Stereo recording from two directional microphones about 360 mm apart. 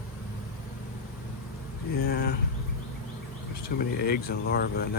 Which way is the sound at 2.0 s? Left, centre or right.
Left.